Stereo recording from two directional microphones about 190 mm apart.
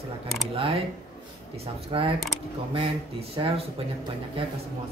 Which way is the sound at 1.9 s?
25° right (ahead or behind).